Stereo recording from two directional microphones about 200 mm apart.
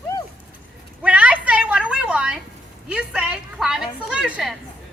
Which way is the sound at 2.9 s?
5° right (ahead or behind).